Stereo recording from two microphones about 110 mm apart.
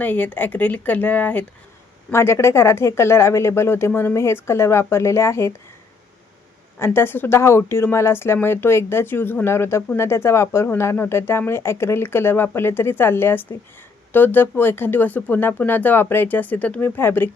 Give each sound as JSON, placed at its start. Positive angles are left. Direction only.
{"t": 0.0, "sound": "speech", "side_deg": 15}
{"t": 2.1, "sound": "speech", "side_deg": 25}
{"t": 6.7, "sound": "speech", "side_deg": 20}